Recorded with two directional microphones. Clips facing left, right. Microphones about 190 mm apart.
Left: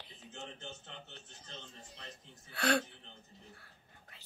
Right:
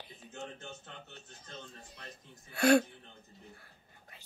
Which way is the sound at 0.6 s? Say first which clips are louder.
Right 1 dB; 25° left (ahead or behind).